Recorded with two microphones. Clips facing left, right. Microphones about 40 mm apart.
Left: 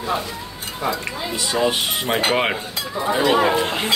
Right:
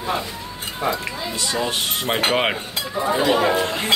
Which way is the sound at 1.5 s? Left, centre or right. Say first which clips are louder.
Left 5 dB; centre.